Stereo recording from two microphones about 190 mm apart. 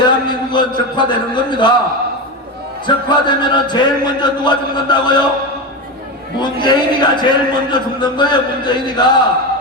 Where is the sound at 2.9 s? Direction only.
25° left (ahead or behind).